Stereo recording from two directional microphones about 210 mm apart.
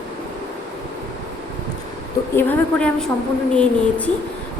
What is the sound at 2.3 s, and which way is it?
A woman's voice, 5° left (ahead or behind).